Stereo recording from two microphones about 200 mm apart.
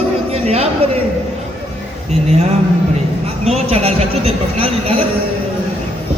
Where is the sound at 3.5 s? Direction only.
30° right (ahead or behind).